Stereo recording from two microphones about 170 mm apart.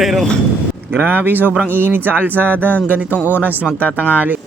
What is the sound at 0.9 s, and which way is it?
Speech, 10° right (ahead or behind).